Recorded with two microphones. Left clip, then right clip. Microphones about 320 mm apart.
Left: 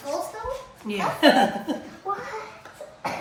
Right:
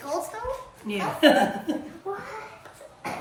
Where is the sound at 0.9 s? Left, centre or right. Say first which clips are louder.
Left 1 dB; centre.